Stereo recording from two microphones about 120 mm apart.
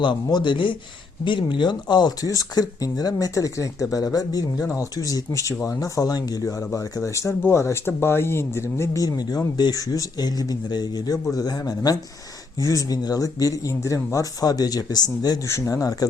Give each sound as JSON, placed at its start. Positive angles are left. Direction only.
{"t": 0.0, "sound": "speech", "side_deg": 40}